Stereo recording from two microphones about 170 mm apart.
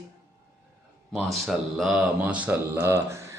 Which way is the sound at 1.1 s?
Centre (ahead or behind).